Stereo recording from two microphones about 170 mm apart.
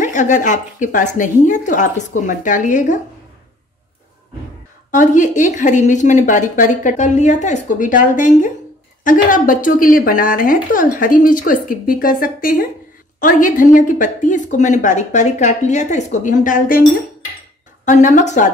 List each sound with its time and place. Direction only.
0.0 s speech: 45° left (ahead or behind)
4.9 s speech: 50° left (ahead or behind)
17.8 s speech: 45° left (ahead or behind)